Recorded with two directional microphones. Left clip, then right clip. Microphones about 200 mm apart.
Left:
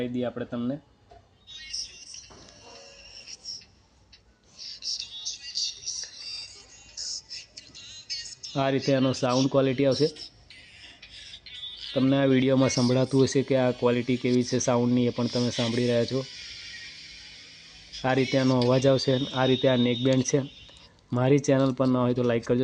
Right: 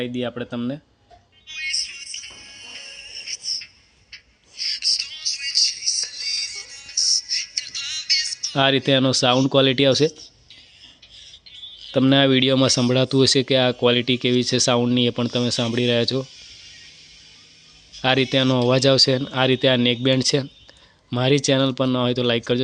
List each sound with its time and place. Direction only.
0.0 s speech: 25° right (ahead or behind)
1.5 s music: 50° right (ahead or behind)
8.5 s speech: 20° right (ahead or behind)
11.9 s speech: 25° right (ahead or behind)
12.3 s speech: 10° right (ahead or behind)
18.0 s speech: 10° right (ahead or behind)